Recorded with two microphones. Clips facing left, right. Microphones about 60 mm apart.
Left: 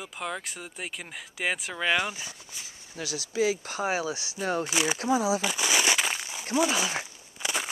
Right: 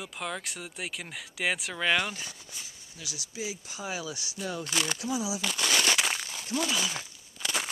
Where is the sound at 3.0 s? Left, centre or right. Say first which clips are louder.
Left 9 dB; left.